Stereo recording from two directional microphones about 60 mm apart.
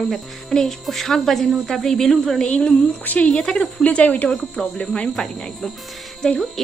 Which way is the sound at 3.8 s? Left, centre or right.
Left.